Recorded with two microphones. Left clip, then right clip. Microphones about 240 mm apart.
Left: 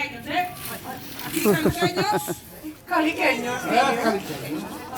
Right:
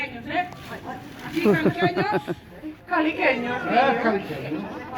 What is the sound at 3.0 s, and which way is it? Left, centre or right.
A woman's voice, left.